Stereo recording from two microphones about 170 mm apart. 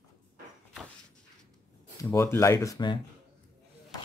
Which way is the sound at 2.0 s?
15° left (ahead or behind).